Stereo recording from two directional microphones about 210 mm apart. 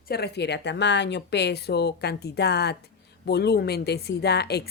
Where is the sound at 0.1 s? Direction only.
50° left (ahead or behind).